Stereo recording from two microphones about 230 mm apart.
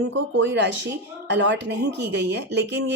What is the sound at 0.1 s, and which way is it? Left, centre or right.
Speech, right.